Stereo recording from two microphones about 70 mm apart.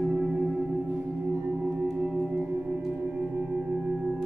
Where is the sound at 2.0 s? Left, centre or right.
Centre.